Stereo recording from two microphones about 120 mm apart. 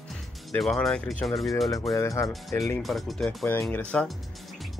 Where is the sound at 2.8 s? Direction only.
Centre (ahead or behind).